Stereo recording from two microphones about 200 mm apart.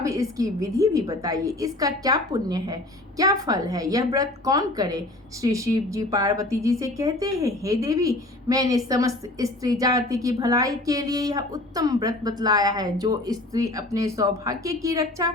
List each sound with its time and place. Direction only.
0.0 s a woman's voice: 15° right (ahead or behind)